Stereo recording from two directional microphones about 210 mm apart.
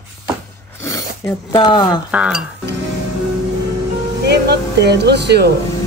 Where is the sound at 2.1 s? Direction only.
5° right (ahead or behind).